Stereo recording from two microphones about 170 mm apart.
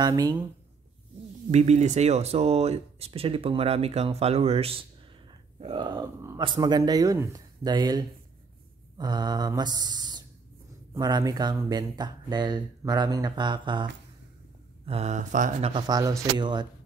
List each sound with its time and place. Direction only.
0.0 s speech: 20° right (ahead or behind)
1.5 s speech: 40° right (ahead or behind)
14.9 s speech: 40° right (ahead or behind)
15.7 s speech: 20° right (ahead or behind)